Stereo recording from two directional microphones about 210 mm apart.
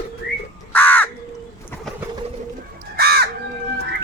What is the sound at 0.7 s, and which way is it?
Crow, 10° left (ahead or behind).